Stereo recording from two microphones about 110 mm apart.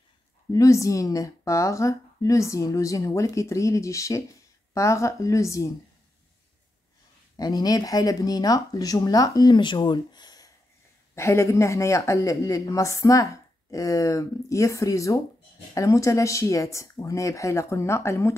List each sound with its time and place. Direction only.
0.5 s speech: 30° left (ahead or behind)
7.3 s speech: 35° left (ahead or behind)
11.1 s speech: 25° left (ahead or behind)